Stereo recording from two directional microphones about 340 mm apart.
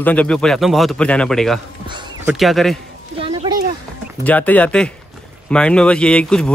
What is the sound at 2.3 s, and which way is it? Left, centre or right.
Speech, centre.